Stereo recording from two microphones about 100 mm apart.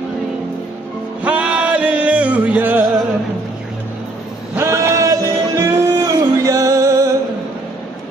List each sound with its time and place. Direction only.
1.2 s music: 10° right (ahead or behind)
4.6 s music: 30° right (ahead or behind)